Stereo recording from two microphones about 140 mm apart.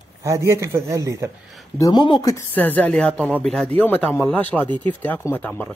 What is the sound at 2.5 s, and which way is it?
Speech, 10° left (ahead or behind).